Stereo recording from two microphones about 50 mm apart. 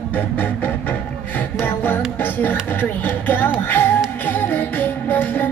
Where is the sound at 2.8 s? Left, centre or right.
Left.